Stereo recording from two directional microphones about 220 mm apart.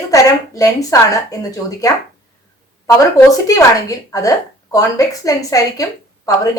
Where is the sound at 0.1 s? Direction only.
15° left (ahead or behind).